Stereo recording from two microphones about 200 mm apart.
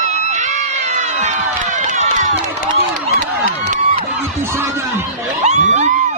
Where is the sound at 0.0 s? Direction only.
35° right (ahead or behind).